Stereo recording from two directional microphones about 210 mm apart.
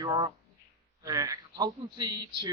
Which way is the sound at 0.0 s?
20° right (ahead or behind).